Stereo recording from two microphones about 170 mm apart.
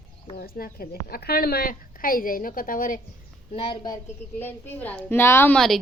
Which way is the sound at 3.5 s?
30° left (ahead or behind).